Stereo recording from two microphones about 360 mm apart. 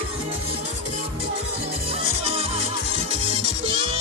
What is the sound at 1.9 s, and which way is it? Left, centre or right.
Music, centre.